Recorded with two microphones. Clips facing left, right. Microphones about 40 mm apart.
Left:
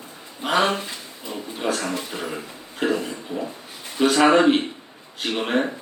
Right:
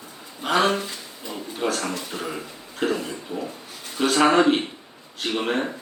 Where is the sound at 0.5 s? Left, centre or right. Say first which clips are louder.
Even; left.